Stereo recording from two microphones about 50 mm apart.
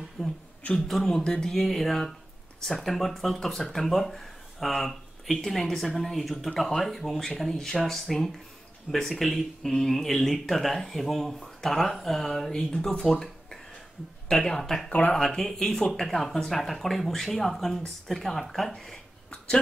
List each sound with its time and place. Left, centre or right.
0.2 s speech: centre
1.2 s speech: centre
1.5 s speech: centre
14.9 s speech: left
15.1 s speech: centre